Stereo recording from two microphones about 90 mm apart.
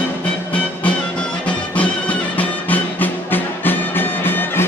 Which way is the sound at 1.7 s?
15° left (ahead or behind).